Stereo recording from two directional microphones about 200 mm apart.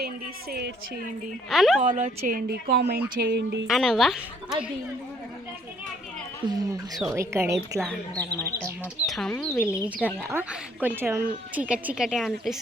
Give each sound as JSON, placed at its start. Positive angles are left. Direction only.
{"t": 1.5, "sound": "a woman's voice", "side_deg": 0}
{"t": 1.9, "sound": "speech", "side_deg": -40}
{"t": 3.7, "sound": "a woman's voice", "side_deg": 0}
{"t": 6.4, "sound": "speech", "side_deg": -25}
{"t": 7.2, "sound": "speech", "side_deg": -15}
{"t": 9.0, "sound": "a woman's voice", "side_deg": 0}